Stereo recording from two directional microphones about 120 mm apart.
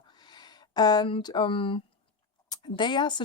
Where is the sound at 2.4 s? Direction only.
35° left (ahead or behind).